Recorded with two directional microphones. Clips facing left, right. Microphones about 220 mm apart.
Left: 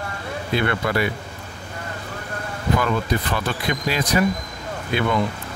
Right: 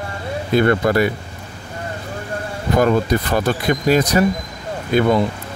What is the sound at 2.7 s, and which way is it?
Speech, 40° right (ahead or behind).